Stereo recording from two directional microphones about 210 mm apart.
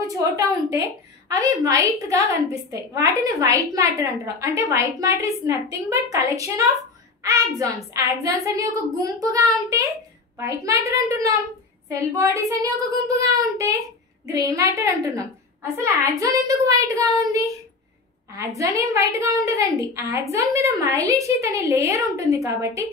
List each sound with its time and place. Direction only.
0.0 s a woman's voice: 15° right (ahead or behind)